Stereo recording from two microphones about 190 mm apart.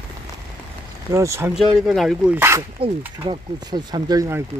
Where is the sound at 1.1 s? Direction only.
15° right (ahead or behind).